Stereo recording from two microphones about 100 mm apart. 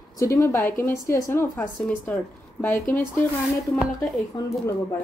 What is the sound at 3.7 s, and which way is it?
Speech, centre (ahead or behind).